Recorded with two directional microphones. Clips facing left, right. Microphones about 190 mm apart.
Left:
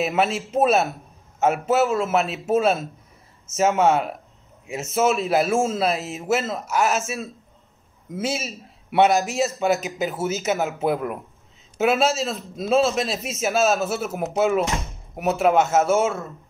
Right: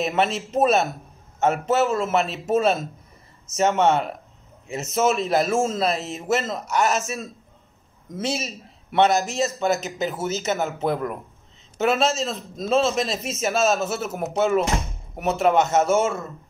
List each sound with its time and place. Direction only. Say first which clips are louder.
0.0 s a man's voice: left 1 dB; 5° left (ahead or behind)